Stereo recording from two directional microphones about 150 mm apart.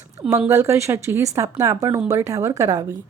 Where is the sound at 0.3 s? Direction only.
15° right (ahead or behind).